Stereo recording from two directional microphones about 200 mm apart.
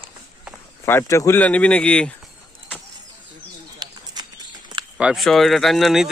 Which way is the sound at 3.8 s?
20° right (ahead or behind).